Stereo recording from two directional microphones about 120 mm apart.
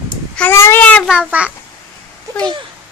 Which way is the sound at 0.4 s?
20° left (ahead or behind).